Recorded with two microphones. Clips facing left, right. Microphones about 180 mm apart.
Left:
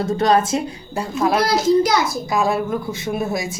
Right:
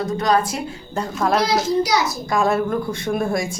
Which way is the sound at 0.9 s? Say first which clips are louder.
Left 1 dB; 5° left (ahead or behind).